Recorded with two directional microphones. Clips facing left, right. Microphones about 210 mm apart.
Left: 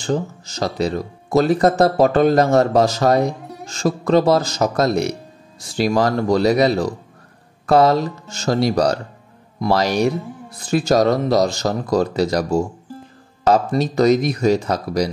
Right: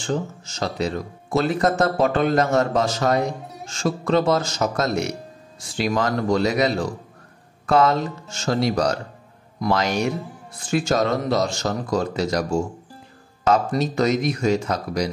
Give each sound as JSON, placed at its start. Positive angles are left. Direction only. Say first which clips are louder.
{"t": 0.0, "sound": "speech", "louder": "left 4 dB", "side_deg": 35}